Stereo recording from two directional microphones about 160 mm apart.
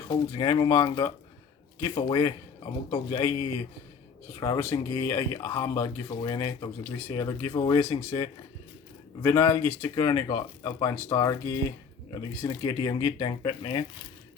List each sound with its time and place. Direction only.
0.1 s speech: 25° left (ahead or behind)
1.8 s speech: 25° left (ahead or behind)
4.4 s speech: 25° left (ahead or behind)
9.2 s speech: 15° left (ahead or behind); by 13.8 s 30° left (ahead or behind)